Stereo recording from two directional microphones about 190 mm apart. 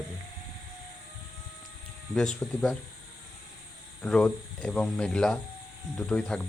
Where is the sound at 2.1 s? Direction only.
5° left (ahead or behind).